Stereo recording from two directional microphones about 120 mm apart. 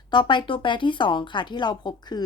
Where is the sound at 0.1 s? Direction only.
40° left (ahead or behind).